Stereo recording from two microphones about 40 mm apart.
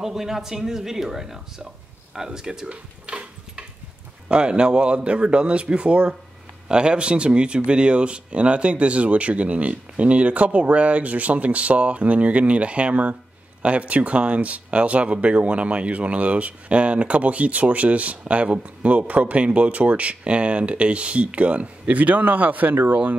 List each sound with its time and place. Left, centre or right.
0.0 s speech: centre
2.7 s a sound: right
4.3 s a man's voice: right